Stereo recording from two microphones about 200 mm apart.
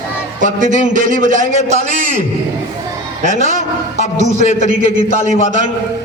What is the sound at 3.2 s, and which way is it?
A man's voice, 35° right (ahead or behind).